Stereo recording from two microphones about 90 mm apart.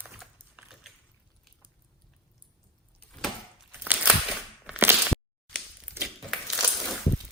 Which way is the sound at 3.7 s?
15° right (ahead or behind).